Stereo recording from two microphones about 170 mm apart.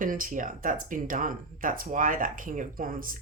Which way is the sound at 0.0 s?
55° right (ahead or behind).